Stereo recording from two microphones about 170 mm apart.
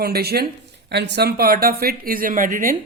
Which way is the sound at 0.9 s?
85° right.